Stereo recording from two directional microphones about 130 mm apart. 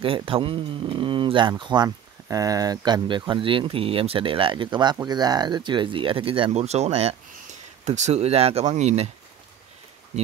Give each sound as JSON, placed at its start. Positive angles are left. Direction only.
{"t": 0.0, "sound": "speech", "side_deg": -45}
{"t": 7.8, "sound": "speech", "side_deg": -65}